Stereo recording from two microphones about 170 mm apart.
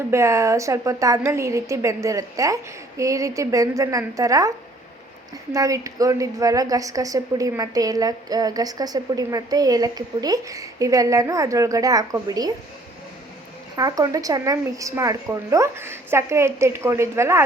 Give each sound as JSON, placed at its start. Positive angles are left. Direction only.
{"t": 0.1, "sound": "a woman's voice", "side_deg": -15}
{"t": 13.7, "sound": "a woman's voice", "side_deg": -20}